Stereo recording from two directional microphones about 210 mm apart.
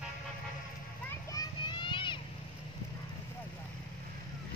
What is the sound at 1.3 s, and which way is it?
Children playing, 20° left (ahead or behind).